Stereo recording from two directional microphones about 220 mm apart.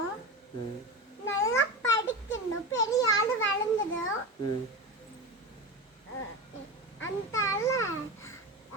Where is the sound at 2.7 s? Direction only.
15° left (ahead or behind).